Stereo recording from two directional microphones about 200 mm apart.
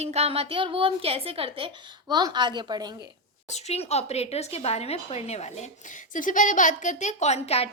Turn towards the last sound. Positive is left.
turn(degrees=30)  # may be behind; listen again after turning